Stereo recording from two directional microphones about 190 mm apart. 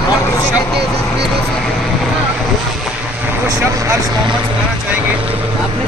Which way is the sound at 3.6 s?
15° right (ahead or behind).